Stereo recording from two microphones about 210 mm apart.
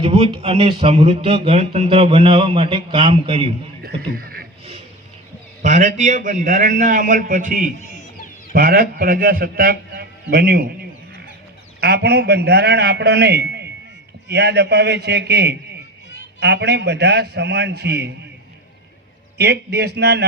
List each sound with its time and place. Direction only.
0.0 s speech: 25° right (ahead or behind)
3.8 s speech: 45° right (ahead or behind)
5.6 s a man's voice: 35° right (ahead or behind)
7.8 s chicken: 35° left (ahead or behind)
8.5 s a man's voice: 45° right (ahead or behind)
11.8 s a man's voice: 50° right (ahead or behind)
19.4 s a man's voice: 50° right (ahead or behind)